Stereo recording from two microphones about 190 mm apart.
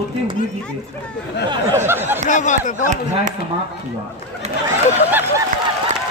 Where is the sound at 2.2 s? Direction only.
40° left (ahead or behind).